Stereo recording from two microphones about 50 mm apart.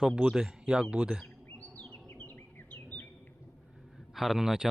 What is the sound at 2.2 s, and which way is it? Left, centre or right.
Bird, left.